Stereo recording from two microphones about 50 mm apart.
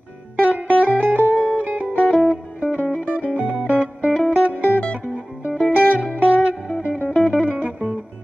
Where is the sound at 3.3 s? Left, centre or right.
Right.